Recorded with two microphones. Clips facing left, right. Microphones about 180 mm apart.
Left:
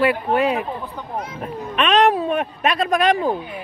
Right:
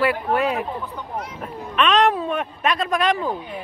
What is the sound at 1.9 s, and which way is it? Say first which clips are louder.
Speech: left 3 dB; 10° left (ahead or behind).